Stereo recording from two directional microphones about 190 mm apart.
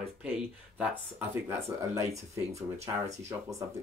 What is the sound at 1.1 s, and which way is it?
Speech, 10° right (ahead or behind).